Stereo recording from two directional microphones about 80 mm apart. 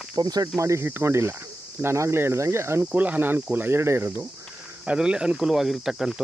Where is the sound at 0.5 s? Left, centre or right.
Right.